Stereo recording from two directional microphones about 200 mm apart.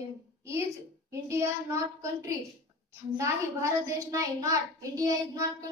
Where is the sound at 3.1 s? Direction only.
15° right (ahead or behind).